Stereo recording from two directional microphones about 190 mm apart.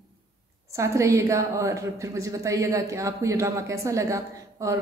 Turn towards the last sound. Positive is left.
turn(degrees=-15)  # may be behind; listen again after turning